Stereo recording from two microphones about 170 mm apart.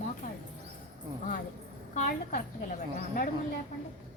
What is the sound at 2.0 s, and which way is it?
Speech, 50° left (ahead or behind).